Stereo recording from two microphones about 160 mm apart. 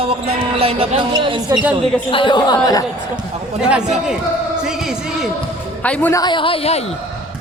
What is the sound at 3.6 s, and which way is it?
A man's voice, 5° right (ahead or behind).